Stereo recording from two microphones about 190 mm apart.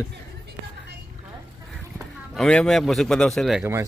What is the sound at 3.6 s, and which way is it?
Speech, 15° right (ahead or behind).